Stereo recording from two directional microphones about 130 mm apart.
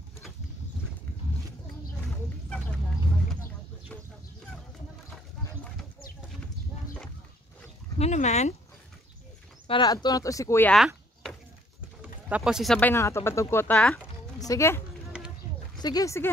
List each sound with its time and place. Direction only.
2.2 s a sound: 10° left (ahead or behind)
8.0 s speech: 60° left (ahead or behind)
9.7 s speech: 35° left (ahead or behind)
12.0 s a sound: 10° right (ahead or behind)
12.7 s speech: 15° left (ahead or behind)
13.7 s speech: 5° left (ahead or behind)
14.4 s speech: 25° left (ahead or behind)
15.8 s speech: 30° left (ahead or behind)